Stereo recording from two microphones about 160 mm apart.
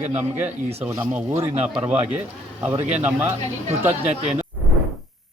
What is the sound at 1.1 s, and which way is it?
Speech, 10° right (ahead or behind).